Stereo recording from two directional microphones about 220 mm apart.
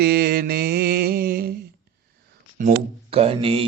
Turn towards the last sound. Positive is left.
turn(degrees=-25)  # may be behind; listen again after turning